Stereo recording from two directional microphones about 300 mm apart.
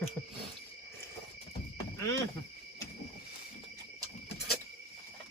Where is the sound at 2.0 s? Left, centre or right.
Centre.